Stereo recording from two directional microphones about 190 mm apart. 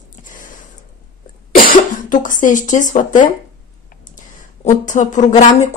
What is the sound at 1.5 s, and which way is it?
Speech, 45° left (ahead or behind).